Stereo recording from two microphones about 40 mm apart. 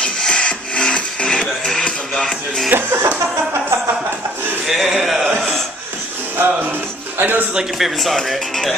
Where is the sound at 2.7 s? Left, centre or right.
Right.